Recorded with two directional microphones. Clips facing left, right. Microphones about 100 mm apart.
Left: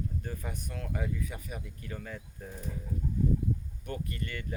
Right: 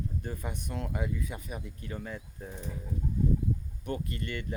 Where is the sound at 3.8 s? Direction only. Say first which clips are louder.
Right 4 dB; 25° right (ahead or behind).